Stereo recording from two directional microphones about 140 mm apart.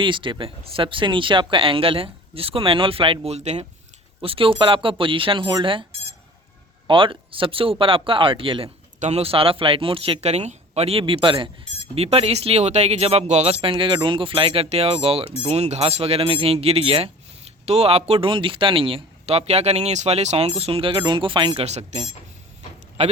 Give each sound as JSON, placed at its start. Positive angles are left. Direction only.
{"t": 0.0, "sound": "speech", "side_deg": -35}
{"t": 4.2, "sound": "speech", "side_deg": -40}
{"t": 6.8, "sound": "speech", "side_deg": -40}
{"t": 9.0, "sound": "a man's voice", "side_deg": -50}